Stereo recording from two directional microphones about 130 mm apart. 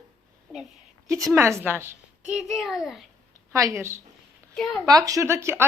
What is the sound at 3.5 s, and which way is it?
Speech, 25° right (ahead or behind).